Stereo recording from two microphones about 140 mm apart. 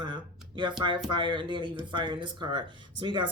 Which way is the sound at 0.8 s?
35° right (ahead or behind).